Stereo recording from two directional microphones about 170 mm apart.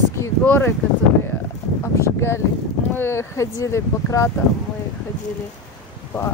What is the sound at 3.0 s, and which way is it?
Speech, 15° left (ahead or behind).